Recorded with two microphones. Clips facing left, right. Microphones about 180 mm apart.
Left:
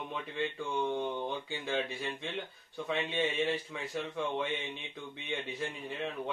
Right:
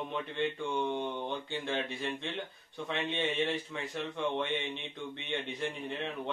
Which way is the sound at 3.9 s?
5° left (ahead or behind).